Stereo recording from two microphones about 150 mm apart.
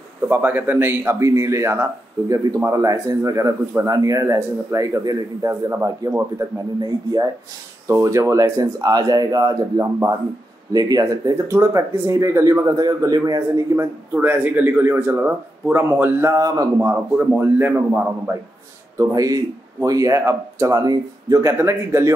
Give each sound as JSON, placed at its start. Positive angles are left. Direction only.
{"t": 0.3, "sound": "a man's voice", "side_deg": -15}
{"t": 17.2, "sound": "a man's voice", "side_deg": -10}